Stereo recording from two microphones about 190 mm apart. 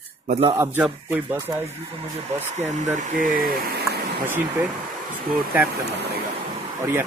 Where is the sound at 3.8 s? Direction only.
10° right (ahead or behind).